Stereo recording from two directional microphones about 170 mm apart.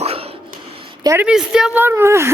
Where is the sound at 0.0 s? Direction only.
35° right (ahead or behind).